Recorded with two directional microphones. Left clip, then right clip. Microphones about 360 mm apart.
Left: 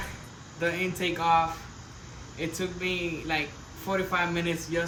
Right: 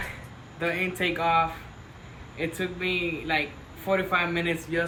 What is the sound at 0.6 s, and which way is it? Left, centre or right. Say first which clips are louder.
Speech: right 2 dB; centre.